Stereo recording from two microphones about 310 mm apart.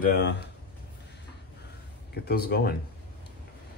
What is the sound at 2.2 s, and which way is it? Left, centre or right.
Speech, left.